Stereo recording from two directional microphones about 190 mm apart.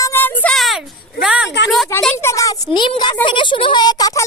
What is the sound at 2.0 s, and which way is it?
A woman's voice, 10° left (ahead or behind).